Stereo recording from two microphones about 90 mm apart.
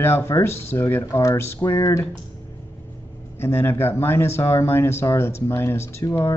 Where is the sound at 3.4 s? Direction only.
25° left (ahead or behind).